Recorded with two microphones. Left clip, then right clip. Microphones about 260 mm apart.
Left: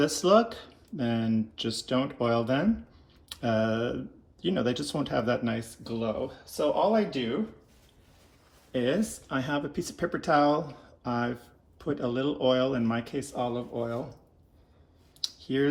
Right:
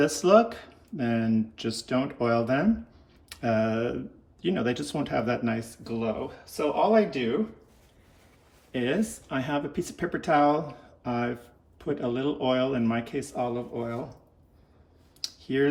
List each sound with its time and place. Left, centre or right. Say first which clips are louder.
0.0 s speech: right 2 dB; centre
8.7 s speech: even; centre
12.0 s speech: left 1 dB; centre
15.2 s a sound: right 1 dB; centre